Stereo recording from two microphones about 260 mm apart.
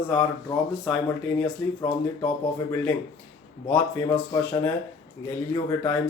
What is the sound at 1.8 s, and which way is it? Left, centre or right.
Speech, centre.